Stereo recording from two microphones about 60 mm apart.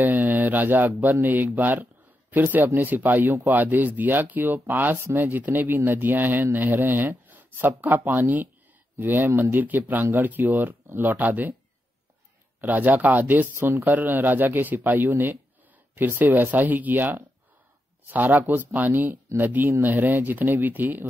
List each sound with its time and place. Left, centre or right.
0.0 s mantra: right
1.2 s speech: right
12.5 s speech: right